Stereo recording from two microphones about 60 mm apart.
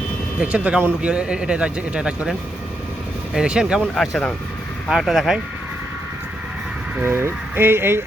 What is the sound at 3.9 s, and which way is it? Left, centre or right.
Speech, centre.